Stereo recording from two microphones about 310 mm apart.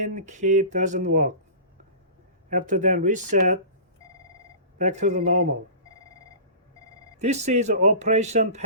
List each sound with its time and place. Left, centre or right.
0.0 s speech: right
2.5 s speech: right
4.8 s speech: right
7.2 s speech: right